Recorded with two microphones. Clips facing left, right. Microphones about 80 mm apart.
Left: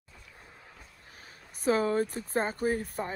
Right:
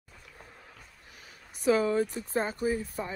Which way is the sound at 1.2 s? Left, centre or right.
Left.